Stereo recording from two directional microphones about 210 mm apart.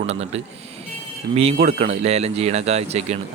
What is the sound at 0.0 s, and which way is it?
A man's voice, 30° right (ahead or behind).